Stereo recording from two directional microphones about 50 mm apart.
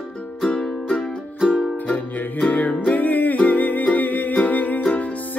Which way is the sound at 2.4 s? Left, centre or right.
Left.